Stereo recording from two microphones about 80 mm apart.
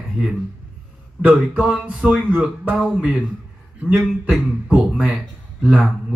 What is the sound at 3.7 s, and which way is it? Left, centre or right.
A man's voice, centre.